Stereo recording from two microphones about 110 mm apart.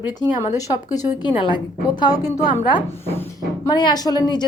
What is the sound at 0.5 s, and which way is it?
Speech, 40° left (ahead or behind).